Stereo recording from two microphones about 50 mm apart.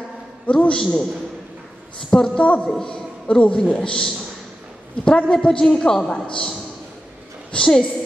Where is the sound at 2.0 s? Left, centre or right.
Centre.